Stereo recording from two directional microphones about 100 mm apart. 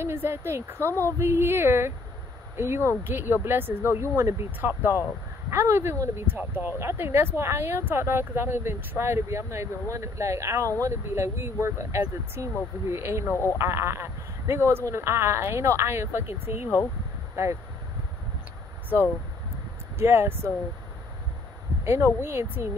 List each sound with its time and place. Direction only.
0.0 s speech: 25° right (ahead or behind)
0.8 s speech: 20° left (ahead or behind)
1.2 s speech: 25° right (ahead or behind)
13.3 s speech: 25° left (ahead or behind)
13.6 s speech: 25° right (ahead or behind)
16.6 s speech: 20° left (ahead or behind)
20.0 s speech: 25° right (ahead or behind)
21.8 s speech: 25° right (ahead or behind)